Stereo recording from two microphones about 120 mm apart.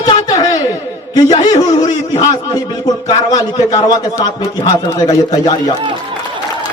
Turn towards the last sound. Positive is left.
turn(degrees=30)  # may be behind; listen again after turning